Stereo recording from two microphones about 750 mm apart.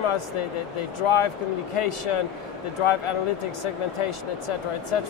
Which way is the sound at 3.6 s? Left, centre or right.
Left.